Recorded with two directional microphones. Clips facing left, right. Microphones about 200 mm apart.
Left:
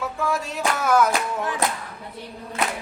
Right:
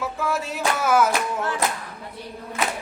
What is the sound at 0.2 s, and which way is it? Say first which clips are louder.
Music: left 1 dB; 5° right (ahead or behind).